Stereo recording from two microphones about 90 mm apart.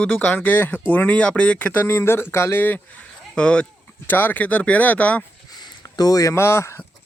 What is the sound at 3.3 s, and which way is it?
Speech, 10° left (ahead or behind).